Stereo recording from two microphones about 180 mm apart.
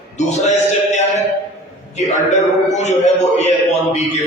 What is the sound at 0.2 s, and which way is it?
Speech, 40° left (ahead or behind).